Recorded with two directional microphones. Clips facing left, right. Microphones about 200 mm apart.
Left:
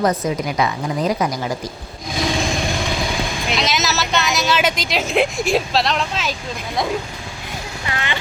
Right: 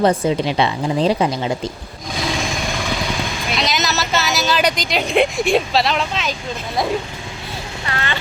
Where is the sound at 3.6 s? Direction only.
Centre (ahead or behind).